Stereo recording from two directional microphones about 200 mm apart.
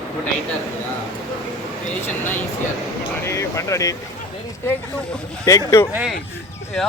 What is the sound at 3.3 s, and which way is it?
Speech, 15° left (ahead or behind).